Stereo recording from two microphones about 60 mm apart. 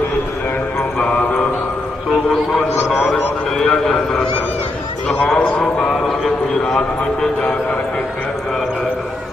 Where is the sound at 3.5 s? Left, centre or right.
Centre.